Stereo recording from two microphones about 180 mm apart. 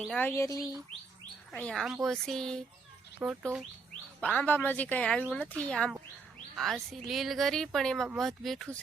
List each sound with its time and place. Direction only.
0.0 s speech: 5° left (ahead or behind)
1.5 s speech: 5° left (ahead or behind)
3.2 s speech: 10° right (ahead or behind)
4.2 s speech: 10° left (ahead or behind)